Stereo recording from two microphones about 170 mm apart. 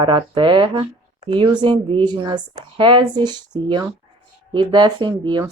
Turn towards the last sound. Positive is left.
turn(degrees=-25)  # may be behind; listen again after turning